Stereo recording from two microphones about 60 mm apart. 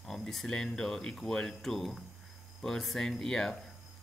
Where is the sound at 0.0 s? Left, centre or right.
Centre.